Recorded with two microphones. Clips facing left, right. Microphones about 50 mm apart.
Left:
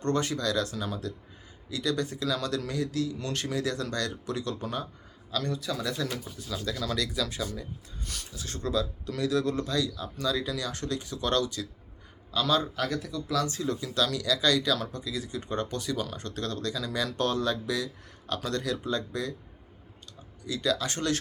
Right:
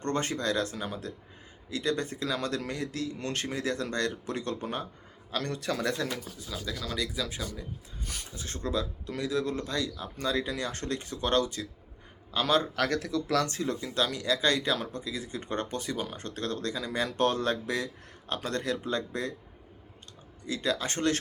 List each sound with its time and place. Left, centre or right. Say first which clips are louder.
0.0 s speech: left 2 dB; right
5.3 s speech: even; right
6.5 s speech: left 4 dB; centre
6.9 s speech: even; centre
8.3 s speech: left 2 dB; right
13.3 s speech: left 1 dB; right
15.4 s speech: left 1 dB; right
20.4 s speech: left 1 dB; right